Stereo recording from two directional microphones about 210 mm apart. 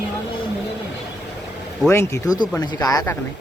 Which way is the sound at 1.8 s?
15° left (ahead or behind).